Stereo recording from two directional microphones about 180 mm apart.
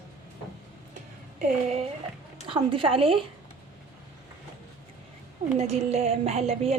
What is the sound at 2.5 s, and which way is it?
Speech, 30° right (ahead or behind).